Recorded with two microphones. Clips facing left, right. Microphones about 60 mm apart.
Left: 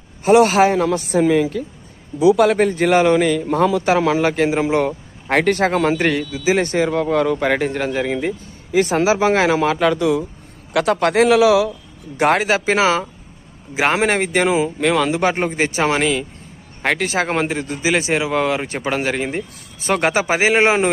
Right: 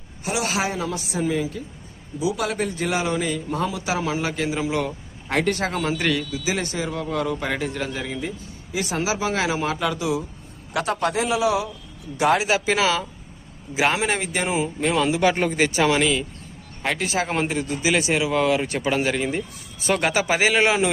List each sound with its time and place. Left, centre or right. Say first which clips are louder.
0.3 s a man's voice: left 13 dB; left
1.2 s a man's voice: left 7 dB; left
3.8 s a man's voice: left 9 dB; left
6.7 s a man's voice: left 9 dB; left
9.6 s a man's voice: left 8 dB; left
10.7 s a man's voice: left 7 dB; left
12.1 s a man's voice: left 3 dB; left
14.0 s a man's voice: left 7 dB; left
14.5 s a man's voice: left 5 dB; left
15.2 s a man's voice: left 2 dB; left
16.0 s a man's voice: left 2 dB; left